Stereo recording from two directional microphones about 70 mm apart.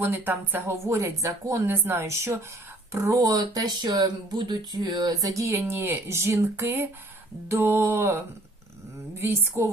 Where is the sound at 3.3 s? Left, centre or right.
Right.